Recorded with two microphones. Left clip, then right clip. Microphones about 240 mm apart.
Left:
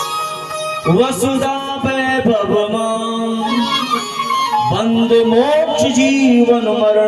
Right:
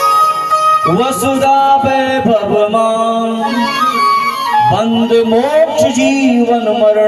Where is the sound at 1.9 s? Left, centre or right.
Centre.